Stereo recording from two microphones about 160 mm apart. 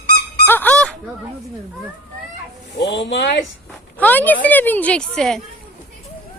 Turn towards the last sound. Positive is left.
turn(degrees=5)  # may be behind; listen again after turning